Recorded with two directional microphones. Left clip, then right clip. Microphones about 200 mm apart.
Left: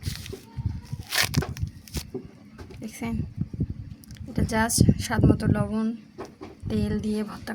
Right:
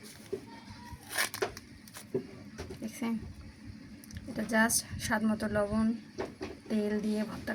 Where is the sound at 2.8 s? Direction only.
60° left (ahead or behind).